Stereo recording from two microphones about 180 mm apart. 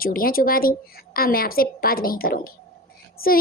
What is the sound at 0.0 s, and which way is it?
A woman's voice, 55° left (ahead or behind).